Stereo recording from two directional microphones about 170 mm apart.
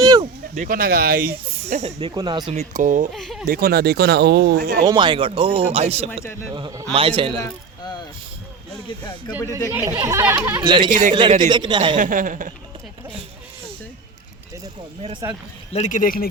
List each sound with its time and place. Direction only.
0.0 s a sound: 25° right (ahead or behind)
0.5 s speech: 55° right (ahead or behind)
1.6 s speech: 40° right (ahead or behind)
2.5 s speech: 45° right (ahead or behind)
3.1 s speech: centre (ahead or behind)
3.4 s speech: 60° right (ahead or behind)
4.9 s speech: 25° right (ahead or behind)
6.5 s a man's voice: 20° right (ahead or behind)
9.7 s speech: 10° right (ahead or behind)
10.6 s a man's voice: 25° right (ahead or behind)
11.9 s speech: 50° right (ahead or behind)
15.2 s speech: 15° right (ahead or behind)
15.7 s speech: 45° left (ahead or behind)